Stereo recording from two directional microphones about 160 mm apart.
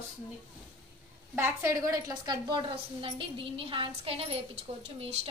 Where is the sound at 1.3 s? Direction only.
15° right (ahead or behind).